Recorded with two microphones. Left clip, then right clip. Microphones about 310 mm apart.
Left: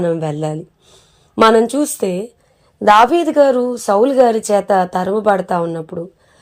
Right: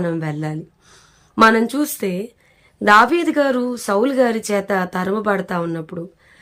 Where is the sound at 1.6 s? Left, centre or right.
Centre.